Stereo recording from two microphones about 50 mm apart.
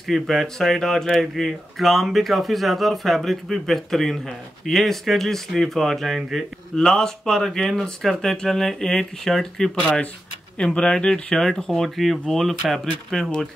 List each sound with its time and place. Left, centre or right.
0.0 s speech: centre
6.7 s speech: centre
10.6 s speech: centre